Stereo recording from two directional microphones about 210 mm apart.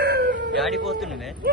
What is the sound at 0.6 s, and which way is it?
Speech, centre (ahead or behind).